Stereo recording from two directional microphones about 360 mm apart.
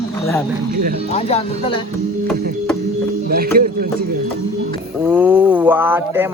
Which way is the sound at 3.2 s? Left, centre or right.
Right.